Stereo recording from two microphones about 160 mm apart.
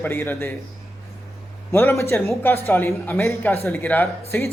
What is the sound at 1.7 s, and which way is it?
A man's voice, 15° left (ahead or behind).